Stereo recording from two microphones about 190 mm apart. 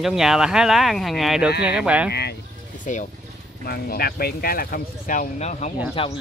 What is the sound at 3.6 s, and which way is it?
Speech, 55° left (ahead or behind).